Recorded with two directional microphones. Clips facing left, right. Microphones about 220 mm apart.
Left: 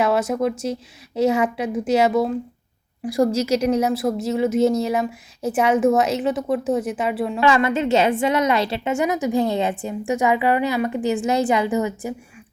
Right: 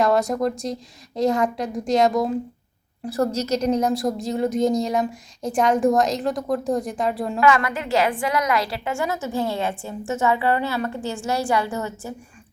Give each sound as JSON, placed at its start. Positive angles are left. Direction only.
{"t": 0.0, "sound": "a woman's voice", "side_deg": 5}
{"t": 7.3, "sound": "a woman's voice", "side_deg": 30}